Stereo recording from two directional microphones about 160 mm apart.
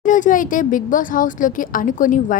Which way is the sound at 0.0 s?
55° left (ahead or behind).